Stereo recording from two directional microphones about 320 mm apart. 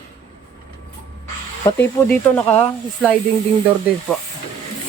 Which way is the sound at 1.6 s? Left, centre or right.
Centre.